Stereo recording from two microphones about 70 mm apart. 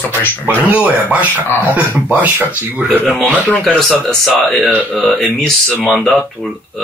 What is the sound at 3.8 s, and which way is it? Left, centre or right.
Speech, centre.